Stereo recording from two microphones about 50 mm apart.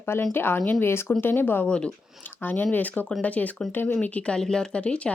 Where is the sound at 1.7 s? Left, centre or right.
Centre.